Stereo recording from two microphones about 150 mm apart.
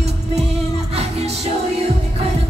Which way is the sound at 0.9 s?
45° right (ahead or behind).